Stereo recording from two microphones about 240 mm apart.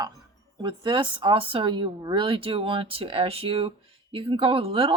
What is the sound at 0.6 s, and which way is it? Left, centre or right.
A woman's voice, centre.